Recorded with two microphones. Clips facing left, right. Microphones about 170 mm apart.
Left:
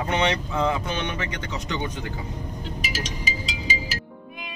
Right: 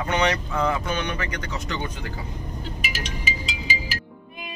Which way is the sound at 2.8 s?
35° left (ahead or behind).